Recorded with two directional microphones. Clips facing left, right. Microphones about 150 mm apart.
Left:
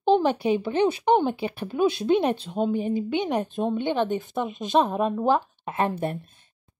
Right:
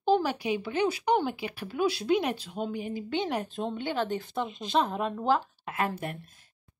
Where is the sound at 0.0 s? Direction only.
25° left (ahead or behind).